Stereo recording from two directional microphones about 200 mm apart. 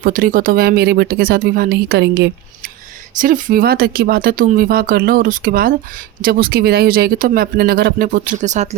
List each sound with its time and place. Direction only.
0.0 s speech: 45° right (ahead or behind)
3.2 s speech: 40° right (ahead or behind)